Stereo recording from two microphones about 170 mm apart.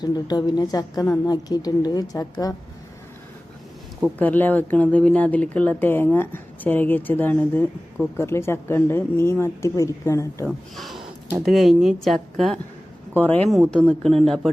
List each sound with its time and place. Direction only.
0.0 s a woman's voice: 25° left (ahead or behind)
4.2 s speech: 10° left (ahead or behind)
10.4 s a woman's voice: centre (ahead or behind)